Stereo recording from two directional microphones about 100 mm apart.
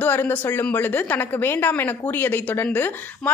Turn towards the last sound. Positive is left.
turn(degrees=20)  # may be behind; listen again after turning